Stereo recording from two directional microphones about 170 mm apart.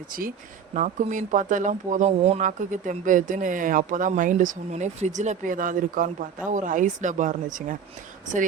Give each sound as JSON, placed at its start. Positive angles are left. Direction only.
{"t": 0.1, "sound": "speech", "side_deg": -55}